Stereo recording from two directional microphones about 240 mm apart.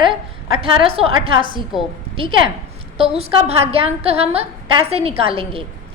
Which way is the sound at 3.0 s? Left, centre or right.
Right.